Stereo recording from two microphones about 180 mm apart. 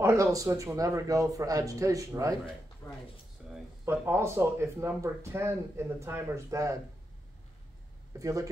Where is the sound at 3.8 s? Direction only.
15° right (ahead or behind).